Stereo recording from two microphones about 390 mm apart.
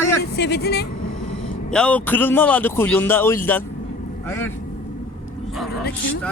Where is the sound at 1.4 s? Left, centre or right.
Centre.